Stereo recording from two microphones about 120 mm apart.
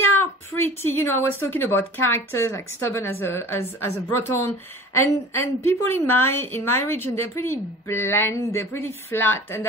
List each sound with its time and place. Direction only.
0.1 s a woman's voice: 20° left (ahead or behind)